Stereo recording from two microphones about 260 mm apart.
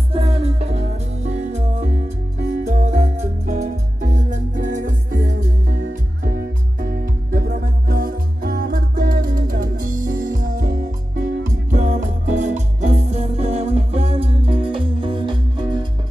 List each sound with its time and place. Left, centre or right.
0.1 s music: right